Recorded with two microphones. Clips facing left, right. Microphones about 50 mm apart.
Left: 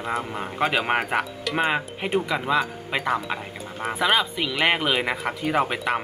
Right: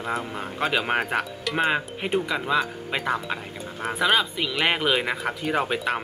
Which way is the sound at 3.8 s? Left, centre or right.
Centre.